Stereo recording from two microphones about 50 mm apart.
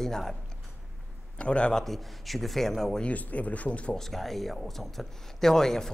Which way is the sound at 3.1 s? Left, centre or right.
Left.